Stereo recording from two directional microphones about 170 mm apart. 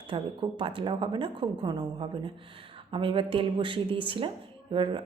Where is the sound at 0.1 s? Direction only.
30° right (ahead or behind).